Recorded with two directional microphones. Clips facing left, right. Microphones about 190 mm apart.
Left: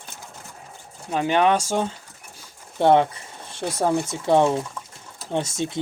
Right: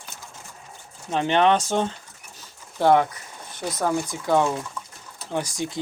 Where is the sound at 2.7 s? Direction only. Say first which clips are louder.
Left 1 dB; 25° left (ahead or behind).